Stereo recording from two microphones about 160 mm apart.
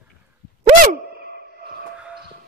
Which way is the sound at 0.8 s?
70° right (ahead or behind).